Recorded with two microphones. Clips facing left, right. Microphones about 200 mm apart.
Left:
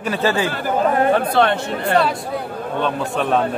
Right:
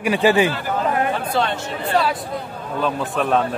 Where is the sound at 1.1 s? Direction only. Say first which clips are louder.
Left 5 dB; 60° left (ahead or behind).